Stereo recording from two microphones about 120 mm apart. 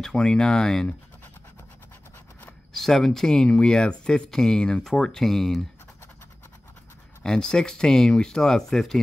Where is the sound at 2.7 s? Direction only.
Centre (ahead or behind).